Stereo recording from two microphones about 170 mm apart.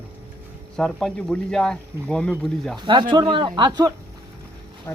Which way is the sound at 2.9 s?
30° right (ahead or behind).